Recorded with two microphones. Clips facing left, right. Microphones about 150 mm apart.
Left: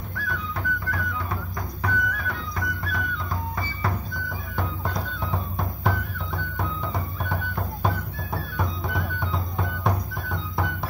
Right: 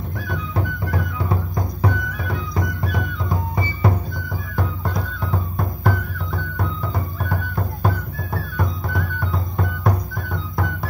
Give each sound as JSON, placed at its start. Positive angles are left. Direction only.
{"t": 0.3, "sound": "music", "side_deg": -25}
{"t": 4.6, "sound": "music", "side_deg": 0}